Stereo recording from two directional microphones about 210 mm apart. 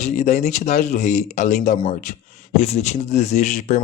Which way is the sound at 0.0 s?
35° left (ahead or behind).